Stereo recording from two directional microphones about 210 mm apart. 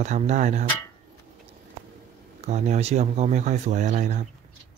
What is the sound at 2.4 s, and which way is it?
Speech, 35° right (ahead or behind).